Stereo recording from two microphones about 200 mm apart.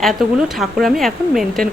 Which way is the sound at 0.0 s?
Centre (ahead or behind).